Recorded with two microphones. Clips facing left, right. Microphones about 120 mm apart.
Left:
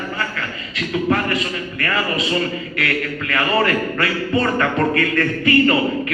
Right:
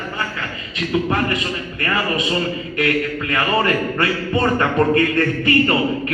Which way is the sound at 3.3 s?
25° right (ahead or behind).